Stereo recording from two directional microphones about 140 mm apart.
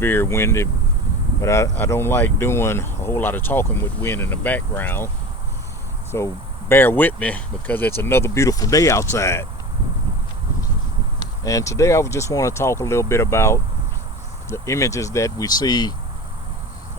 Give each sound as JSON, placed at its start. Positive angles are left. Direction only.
{"t": 0.0, "sound": "speech", "side_deg": 15}
{"t": 6.1, "sound": "speech", "side_deg": 20}
{"t": 11.4, "sound": "speech", "side_deg": 25}